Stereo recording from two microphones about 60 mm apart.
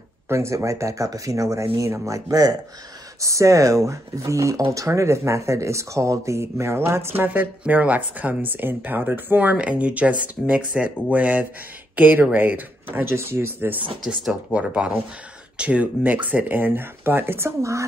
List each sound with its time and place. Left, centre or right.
0.3 s speech: right
2.0 s speech: right
3.2 s speech: right
7.2 s speech: right
13.0 s speech: right
14.0 s speech: centre
14.5 s speech: centre; by 17.5 s right
17.6 s speech: right